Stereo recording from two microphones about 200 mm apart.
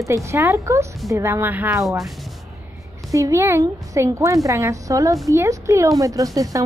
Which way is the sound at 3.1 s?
15° right (ahead or behind).